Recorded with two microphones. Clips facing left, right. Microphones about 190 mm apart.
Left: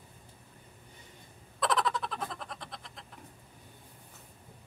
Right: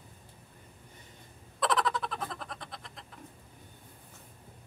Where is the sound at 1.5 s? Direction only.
Centre (ahead or behind).